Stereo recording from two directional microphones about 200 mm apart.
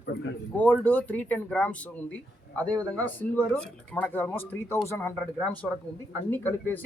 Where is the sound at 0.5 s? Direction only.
10° left (ahead or behind).